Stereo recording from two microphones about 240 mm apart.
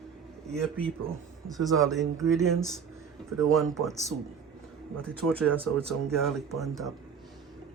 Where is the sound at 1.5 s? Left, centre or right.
Centre.